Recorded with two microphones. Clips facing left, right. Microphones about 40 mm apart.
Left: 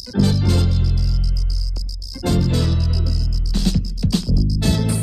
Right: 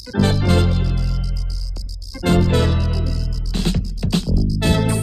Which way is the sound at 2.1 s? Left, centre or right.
Right.